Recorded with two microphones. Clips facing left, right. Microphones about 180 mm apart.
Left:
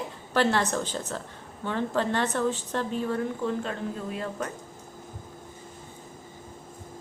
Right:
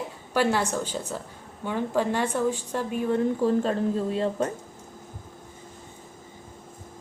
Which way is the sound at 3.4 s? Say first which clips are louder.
Right 7 dB; 35° right (ahead or behind).